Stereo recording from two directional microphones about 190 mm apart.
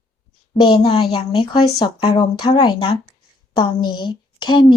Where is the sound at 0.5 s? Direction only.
25° left (ahead or behind).